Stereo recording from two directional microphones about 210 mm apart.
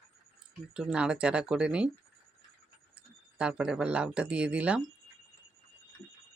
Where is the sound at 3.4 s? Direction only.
5° right (ahead or behind).